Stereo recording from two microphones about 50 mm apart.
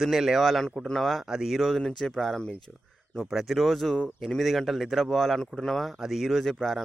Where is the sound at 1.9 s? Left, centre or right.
Centre.